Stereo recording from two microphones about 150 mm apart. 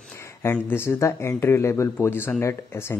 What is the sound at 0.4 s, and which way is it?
Speech, 15° left (ahead or behind).